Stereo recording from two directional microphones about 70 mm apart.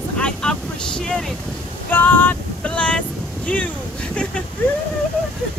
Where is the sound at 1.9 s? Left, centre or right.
Left.